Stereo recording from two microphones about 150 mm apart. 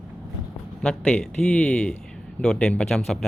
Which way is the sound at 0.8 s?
5° left (ahead or behind).